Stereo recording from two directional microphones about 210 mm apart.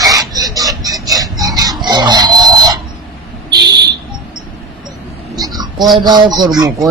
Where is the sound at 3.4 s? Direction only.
20° right (ahead or behind).